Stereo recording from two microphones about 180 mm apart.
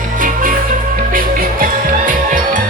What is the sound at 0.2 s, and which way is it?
Music, 50° right (ahead or behind).